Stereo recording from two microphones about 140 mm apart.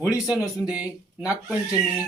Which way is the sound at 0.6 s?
10° right (ahead or behind).